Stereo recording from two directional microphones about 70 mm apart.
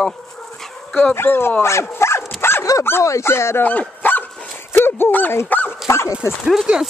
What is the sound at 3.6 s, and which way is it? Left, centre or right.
Dog, left.